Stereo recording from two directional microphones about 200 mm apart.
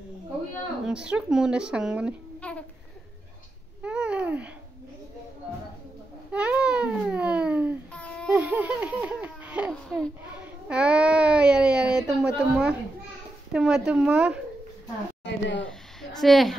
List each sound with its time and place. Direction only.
0.8 s speech: 5° right (ahead or behind)
3.8 s babbling: 5° right (ahead or behind)
6.3 s babbling: 5° right (ahead or behind)
7.9 s babbling: 5° left (ahead or behind)
8.3 s a sound: 5° right (ahead or behind)
12.4 s speech: 5° right (ahead or behind)
15.2 s speech: 65° left (ahead or behind)
16.0 s speech: centre (ahead or behind)